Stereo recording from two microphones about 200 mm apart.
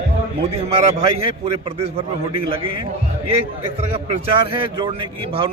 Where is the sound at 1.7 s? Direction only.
30° right (ahead or behind).